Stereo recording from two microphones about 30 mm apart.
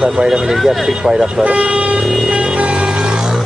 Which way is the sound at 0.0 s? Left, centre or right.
Centre.